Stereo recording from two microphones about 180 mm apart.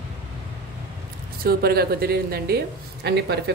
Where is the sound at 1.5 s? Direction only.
60° right (ahead or behind).